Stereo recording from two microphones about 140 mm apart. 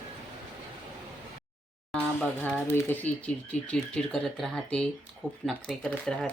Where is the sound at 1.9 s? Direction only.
5° left (ahead or behind).